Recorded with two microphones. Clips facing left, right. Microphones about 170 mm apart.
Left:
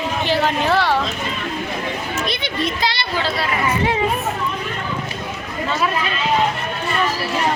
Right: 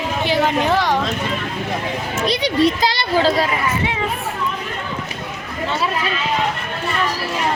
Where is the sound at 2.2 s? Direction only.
35° right (ahead or behind).